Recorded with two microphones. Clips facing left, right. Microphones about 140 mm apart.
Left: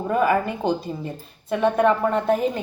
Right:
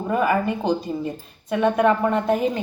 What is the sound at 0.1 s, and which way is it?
A woman's voice, centre (ahead or behind).